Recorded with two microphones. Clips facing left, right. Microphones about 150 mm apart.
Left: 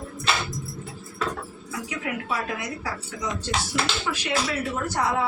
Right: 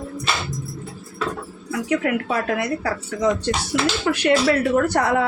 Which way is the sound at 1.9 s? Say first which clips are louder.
Right 9 dB; 65° right (ahead or behind).